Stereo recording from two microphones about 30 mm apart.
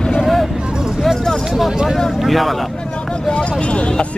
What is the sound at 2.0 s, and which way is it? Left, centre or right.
Vehicle, centre.